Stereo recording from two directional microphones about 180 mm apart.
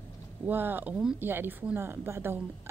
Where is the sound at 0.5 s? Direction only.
10° right (ahead or behind).